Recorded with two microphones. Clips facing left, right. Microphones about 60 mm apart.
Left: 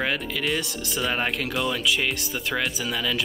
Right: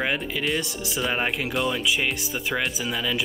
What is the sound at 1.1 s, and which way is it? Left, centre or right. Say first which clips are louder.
Speech: right 1 dB; centre.